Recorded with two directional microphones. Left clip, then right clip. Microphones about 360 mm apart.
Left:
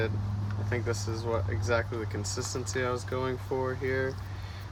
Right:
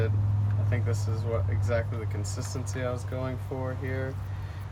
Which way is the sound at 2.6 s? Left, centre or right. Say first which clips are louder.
Left 1 dB; centre.